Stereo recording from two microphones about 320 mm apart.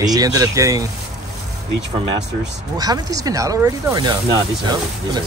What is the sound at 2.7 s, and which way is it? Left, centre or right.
Speech, centre.